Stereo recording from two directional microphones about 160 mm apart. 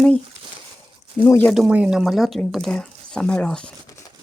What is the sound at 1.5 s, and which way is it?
Speech, 5° right (ahead or behind).